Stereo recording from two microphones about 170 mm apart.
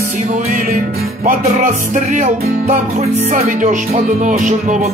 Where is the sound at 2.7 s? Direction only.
55° right (ahead or behind).